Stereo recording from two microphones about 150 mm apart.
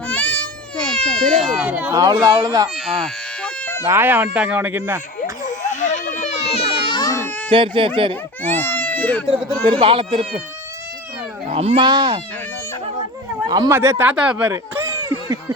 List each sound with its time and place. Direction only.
0.1 s baby cry: 10° left (ahead or behind); by 1.9 s 10° right (ahead or behind)
1.9 s speech: 25° right (ahead or behind)
2.8 s baby cry: centre (ahead or behind)
3.8 s speech: 15° right (ahead or behind)
5.2 s children playing: 55° left (ahead or behind); by 7.0 s 40° left (ahead or behind)
7.0 s baby cry: 20° left (ahead or behind)
7.5 s speech: 35° right (ahead or behind)
8.5 s speech: 10° left (ahead or behind)
9.3 s speech: 40° right (ahead or behind)
11.5 s speech: 45° right (ahead or behind)
11.8 s speech: 30° right (ahead or behind)
13.5 s speech: 25° right (ahead or behind)
13.7 s speech: 15° right (ahead or behind)
14.5 s a sound: 20° right (ahead or behind)